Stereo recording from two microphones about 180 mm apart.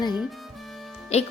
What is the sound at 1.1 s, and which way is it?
Speech, 35° left (ahead or behind).